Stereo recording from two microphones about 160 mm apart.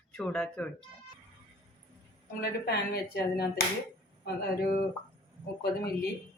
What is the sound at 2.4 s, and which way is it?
A woman's voice, 80° left.